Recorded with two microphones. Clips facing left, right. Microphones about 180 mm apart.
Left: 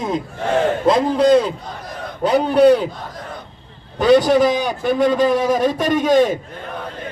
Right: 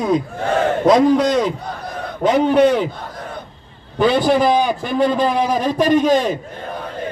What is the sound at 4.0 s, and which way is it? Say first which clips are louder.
A man's voice: left 2 dB; 40° left (ahead or behind).